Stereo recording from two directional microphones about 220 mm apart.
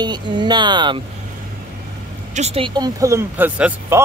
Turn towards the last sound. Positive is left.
turn(degrees=-10)  # may be behind; listen again after turning